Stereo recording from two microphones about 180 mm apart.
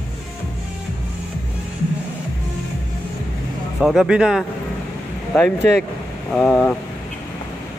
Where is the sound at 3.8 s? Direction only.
Centre (ahead or behind).